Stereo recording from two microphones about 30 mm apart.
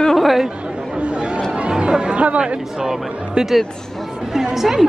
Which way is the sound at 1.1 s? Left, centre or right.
Right.